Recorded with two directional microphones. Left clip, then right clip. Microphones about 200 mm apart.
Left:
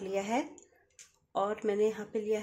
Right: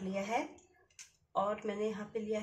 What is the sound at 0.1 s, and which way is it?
Speech, 55° left (ahead or behind).